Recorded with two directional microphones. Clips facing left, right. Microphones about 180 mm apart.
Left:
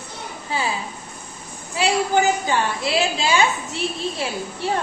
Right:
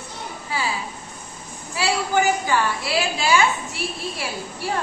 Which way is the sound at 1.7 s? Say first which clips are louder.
Left 2 dB; 20° left (ahead or behind).